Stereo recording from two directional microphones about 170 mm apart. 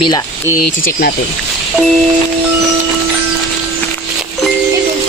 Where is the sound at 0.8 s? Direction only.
60° left (ahead or behind).